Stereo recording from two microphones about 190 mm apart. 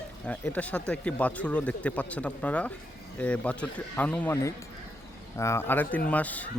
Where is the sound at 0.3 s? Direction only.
5° left (ahead or behind).